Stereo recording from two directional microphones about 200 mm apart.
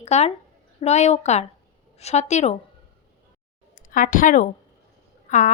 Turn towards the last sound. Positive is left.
turn(degrees=35)  # may be behind; listen again after turning